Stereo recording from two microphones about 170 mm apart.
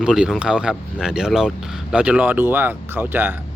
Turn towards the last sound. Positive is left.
turn(degrees=-10)  # may be behind; listen again after turning